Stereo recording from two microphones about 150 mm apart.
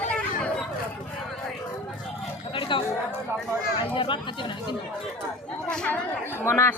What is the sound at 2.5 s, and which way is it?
Chatter, 35° left (ahead or behind).